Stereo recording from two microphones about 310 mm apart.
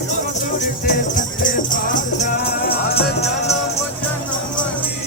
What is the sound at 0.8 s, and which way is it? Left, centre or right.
Music, left.